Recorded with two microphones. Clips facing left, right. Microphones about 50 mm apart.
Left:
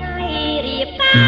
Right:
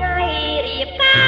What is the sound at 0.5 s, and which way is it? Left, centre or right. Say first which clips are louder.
Music: left 1 dB; centre.